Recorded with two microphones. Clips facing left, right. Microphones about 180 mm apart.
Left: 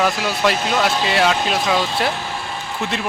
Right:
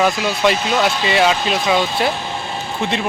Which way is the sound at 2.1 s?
25° right (ahead or behind).